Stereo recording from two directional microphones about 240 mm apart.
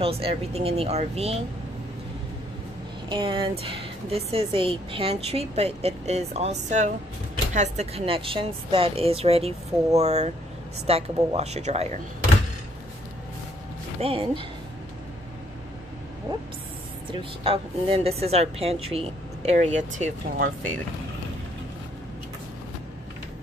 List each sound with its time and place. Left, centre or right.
0.0 s speech: right
3.1 s speech: right
14.0 s speech: right
17.1 s speech: right